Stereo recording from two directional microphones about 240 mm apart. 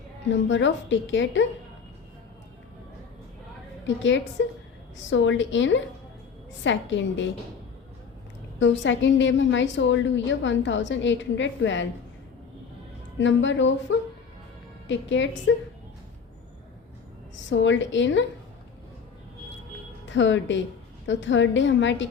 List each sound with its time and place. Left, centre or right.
0.3 s a woman's voice: left
3.8 s a woman's voice: left
8.5 s a woman's voice: left
13.1 s a woman's voice: left
17.5 s a woman's voice: left
20.1 s a woman's voice: left